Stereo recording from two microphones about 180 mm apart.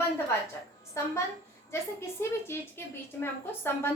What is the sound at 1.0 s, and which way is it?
A woman's voice, 15° left (ahead or behind).